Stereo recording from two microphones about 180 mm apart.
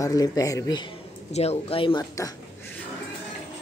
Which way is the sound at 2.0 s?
15° left (ahead or behind).